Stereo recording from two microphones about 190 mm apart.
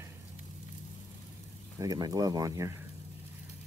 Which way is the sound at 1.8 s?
20° right (ahead or behind).